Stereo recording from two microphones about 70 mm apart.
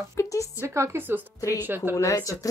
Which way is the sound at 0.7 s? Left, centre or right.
Right.